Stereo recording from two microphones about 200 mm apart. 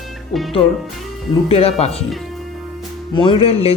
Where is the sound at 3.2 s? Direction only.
25° left (ahead or behind).